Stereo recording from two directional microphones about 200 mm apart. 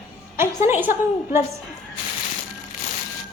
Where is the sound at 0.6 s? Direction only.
10° right (ahead or behind).